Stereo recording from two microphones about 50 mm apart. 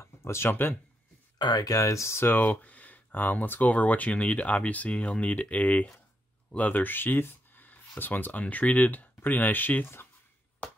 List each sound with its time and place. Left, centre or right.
0.0 s a sound: left
0.5 s speech: left
1.8 s speech: left
2.2 s speech: left